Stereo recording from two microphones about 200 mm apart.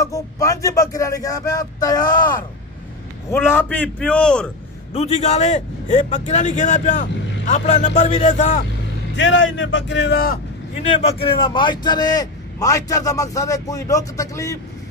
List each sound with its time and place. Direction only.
0.0 s speech: 15° left (ahead or behind)
3.3 s speech: 10° left (ahead or behind)
4.9 s a man's voice: 35° left (ahead or behind)
9.1 s speech: 70° left (ahead or behind); by 10.4 s 50° left (ahead or behind)
10.7 s a man's voice: 30° left (ahead or behind); by 14.6 s 15° left (ahead or behind)